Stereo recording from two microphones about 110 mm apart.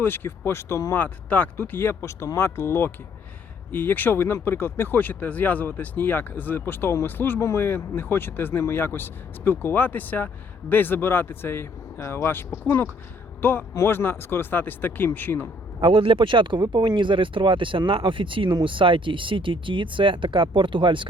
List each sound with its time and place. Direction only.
0.0 s speech: 20° left (ahead or behind)
0.9 s speech: 15° left (ahead or behind)
15.8 s speech: 50° right (ahead or behind)